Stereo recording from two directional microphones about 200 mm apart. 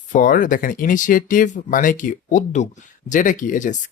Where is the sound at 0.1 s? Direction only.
40° left (ahead or behind).